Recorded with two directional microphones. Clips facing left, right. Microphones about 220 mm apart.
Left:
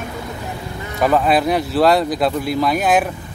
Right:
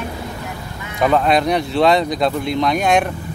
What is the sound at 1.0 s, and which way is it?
Speech, 5° left (ahead or behind).